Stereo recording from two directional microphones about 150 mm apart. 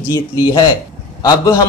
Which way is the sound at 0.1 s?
30° left (ahead or behind).